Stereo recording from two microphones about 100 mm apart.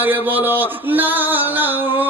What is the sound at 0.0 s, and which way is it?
A man's voice, 20° right (ahead or behind).